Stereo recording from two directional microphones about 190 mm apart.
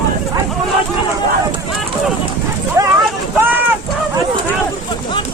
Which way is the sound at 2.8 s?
15° right (ahead or behind).